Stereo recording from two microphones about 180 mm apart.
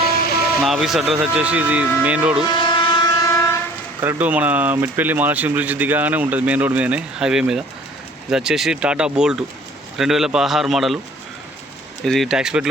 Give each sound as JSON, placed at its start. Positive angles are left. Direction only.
{"t": 0.3, "sound": "music", "side_deg": 60}
{"t": 0.6, "sound": "speech", "side_deg": 0}
{"t": 2.4, "sound": "train", "side_deg": 25}
{"t": 4.0, "sound": "speech", "side_deg": -10}
{"t": 12.0, "sound": "speech", "side_deg": 0}